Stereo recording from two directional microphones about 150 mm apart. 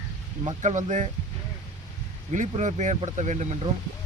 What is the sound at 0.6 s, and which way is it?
Speech, 55° right (ahead or behind).